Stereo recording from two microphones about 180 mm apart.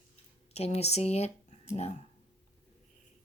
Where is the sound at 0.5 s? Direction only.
35° left (ahead or behind).